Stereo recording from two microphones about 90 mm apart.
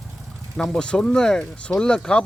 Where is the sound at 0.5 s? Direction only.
5° left (ahead or behind).